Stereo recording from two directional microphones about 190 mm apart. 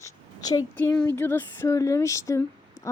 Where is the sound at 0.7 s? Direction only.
10° left (ahead or behind).